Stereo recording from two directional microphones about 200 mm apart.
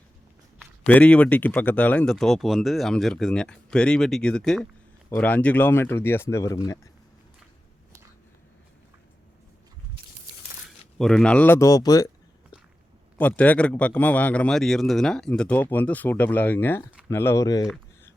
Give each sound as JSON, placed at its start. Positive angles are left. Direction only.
{"t": 0.6, "sound": "a man's voice", "side_deg": 5}
{"t": 10.9, "sound": "speech", "side_deg": 5}
{"t": 13.1, "sound": "a man's voice", "side_deg": 5}